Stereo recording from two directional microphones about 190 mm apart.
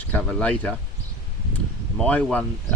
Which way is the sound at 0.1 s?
5° left (ahead or behind).